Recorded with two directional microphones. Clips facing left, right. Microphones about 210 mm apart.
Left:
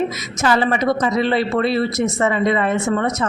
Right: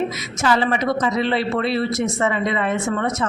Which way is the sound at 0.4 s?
40° left (ahead or behind).